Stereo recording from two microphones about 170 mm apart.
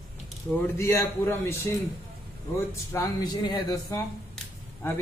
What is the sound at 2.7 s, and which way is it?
A man's voice, 20° left (ahead or behind).